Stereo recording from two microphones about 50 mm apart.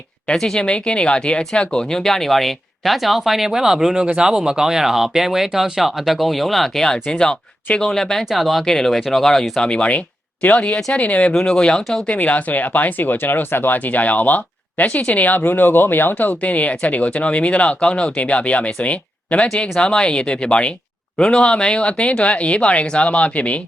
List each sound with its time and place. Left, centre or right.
0.3 s speech: centre
8.2 s speech: centre
8.6 s speech: centre; by 11.3 s left
11.3 s speech: centre
12.0 s speech: left